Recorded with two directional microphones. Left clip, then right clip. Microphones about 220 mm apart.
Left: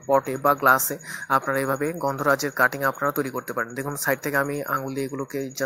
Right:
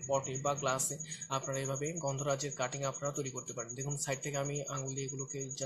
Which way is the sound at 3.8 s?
15° left (ahead or behind).